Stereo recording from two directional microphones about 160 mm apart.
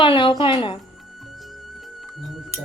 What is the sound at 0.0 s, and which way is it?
Speech, 30° left (ahead or behind).